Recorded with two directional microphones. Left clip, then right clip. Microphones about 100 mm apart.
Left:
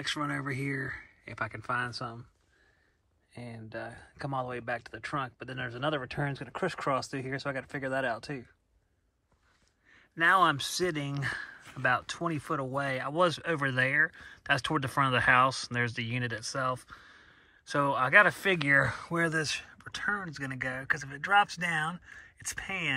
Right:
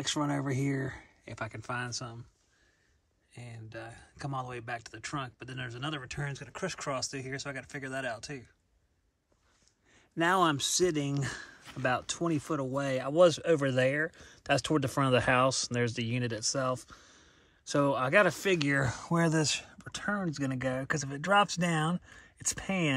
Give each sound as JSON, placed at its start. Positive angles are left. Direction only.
{"t": 0.0, "sound": "speech", "side_deg": -50}
{"t": 1.4, "sound": "speech", "side_deg": -5}
{"t": 3.3, "sound": "speech", "side_deg": 5}
{"t": 5.9, "sound": "speech", "side_deg": 10}
{"t": 9.9, "sound": "speech", "side_deg": -45}
{"t": 20.3, "sound": "speech", "side_deg": -65}